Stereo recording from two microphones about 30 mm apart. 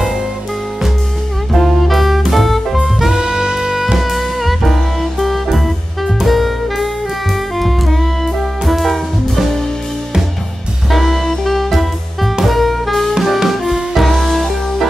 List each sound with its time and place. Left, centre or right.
1.5 s saxophone: centre
2.3 s music: centre
3.1 s music: right
4.0 s music: centre
6.2 s saxophone: centre
7.5 s music: centre
10.9 s music: centre
13.4 s music: centre